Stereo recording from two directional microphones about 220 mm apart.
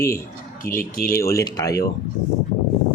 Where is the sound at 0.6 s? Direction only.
40° left (ahead or behind).